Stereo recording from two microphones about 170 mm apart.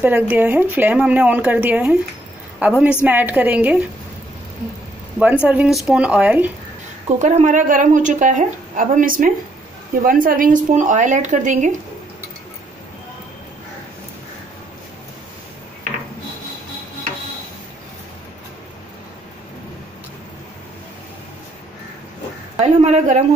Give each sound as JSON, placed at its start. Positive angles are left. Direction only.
{"t": 0.0, "sound": "speech", "side_deg": -10}
{"t": 5.2, "sound": "speech", "side_deg": -5}
{"t": 7.1, "sound": "a woman's voice", "side_deg": -45}
{"t": 22.6, "sound": "a woman's voice", "side_deg": -40}